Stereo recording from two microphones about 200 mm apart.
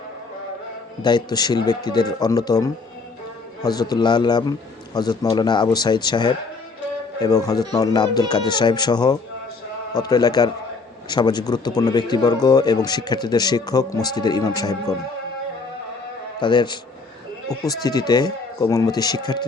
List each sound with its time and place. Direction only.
1.0 s speech: 20° left (ahead or behind)
16.4 s speech: 20° left (ahead or behind)